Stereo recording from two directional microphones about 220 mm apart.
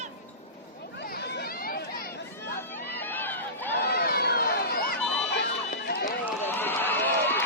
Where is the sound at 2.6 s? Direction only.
10° left (ahead or behind).